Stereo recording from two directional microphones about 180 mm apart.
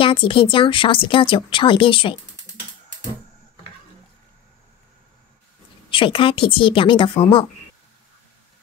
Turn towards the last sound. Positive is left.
turn(degrees=30)  # may be behind; listen again after turning